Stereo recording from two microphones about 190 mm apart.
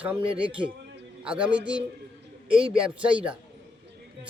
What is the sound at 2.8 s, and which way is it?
Music, 5° right (ahead or behind).